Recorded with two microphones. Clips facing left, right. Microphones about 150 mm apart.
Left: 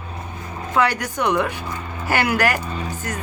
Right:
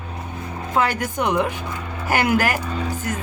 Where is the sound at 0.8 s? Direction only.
45° right (ahead or behind).